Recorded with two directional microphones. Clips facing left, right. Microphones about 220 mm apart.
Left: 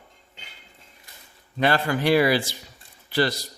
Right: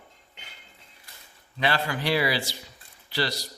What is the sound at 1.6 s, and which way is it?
Speech, 50° left (ahead or behind).